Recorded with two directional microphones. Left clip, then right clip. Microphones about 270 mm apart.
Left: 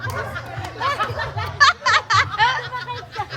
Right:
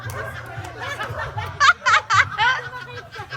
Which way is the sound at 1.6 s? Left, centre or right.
Centre.